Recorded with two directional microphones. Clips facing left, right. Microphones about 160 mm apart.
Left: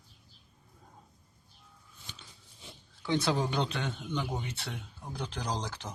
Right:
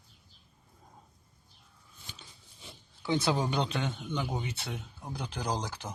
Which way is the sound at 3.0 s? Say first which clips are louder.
Even; 5° right (ahead or behind).